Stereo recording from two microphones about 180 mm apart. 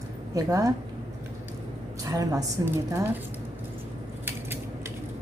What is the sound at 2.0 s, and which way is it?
Speech, 20° right (ahead or behind).